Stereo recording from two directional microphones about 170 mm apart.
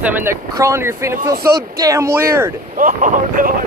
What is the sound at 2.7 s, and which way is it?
Speech, 50° right (ahead or behind).